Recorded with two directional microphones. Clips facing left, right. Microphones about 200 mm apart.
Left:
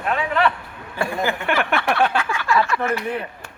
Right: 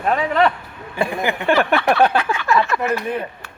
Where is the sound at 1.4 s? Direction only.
35° right (ahead or behind).